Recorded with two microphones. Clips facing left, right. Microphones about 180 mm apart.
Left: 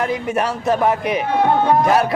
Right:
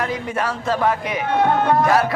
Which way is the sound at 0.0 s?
20° left (ahead or behind).